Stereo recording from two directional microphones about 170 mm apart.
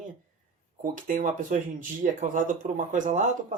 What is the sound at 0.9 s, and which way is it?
Speech, 50° right (ahead or behind).